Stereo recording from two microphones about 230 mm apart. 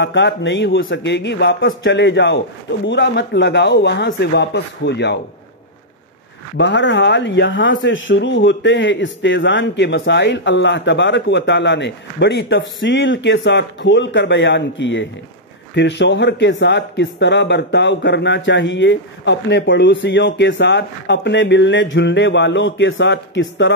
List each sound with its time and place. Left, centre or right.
0.0 s speech: left
6.5 s speech: left